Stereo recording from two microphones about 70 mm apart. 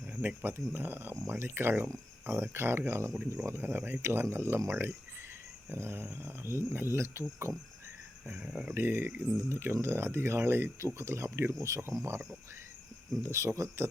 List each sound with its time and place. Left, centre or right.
0.1 s speech: right
8.3 s speech: centre
8.7 s speech: right
13.3 s speech: right